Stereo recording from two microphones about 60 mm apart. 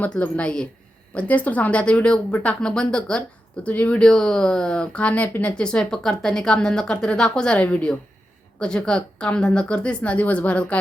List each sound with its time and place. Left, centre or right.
0.0 s a woman's voice: left